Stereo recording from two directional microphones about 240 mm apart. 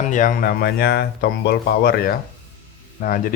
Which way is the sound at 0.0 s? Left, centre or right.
Left.